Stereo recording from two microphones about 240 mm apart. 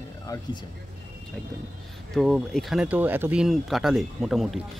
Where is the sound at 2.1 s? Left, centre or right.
Centre.